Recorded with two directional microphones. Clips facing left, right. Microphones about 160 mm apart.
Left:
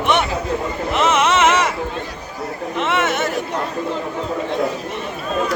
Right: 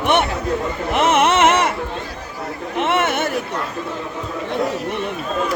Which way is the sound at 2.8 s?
55° right (ahead or behind).